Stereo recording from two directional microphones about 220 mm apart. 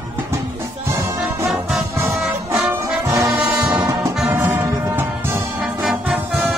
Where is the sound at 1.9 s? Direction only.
10° right (ahead or behind).